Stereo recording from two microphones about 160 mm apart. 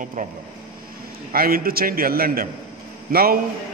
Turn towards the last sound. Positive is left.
turn(degrees=-65)  # may be behind; listen again after turning